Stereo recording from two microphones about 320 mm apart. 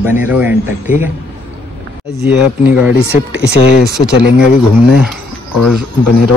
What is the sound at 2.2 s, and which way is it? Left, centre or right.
Speech, centre.